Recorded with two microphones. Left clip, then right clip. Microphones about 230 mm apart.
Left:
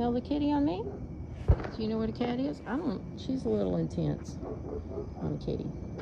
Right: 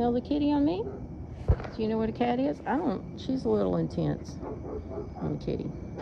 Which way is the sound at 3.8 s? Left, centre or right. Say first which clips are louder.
Right 3 dB; centre.